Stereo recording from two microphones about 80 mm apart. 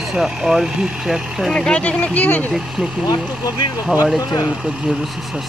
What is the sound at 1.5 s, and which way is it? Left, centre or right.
Speech, centre.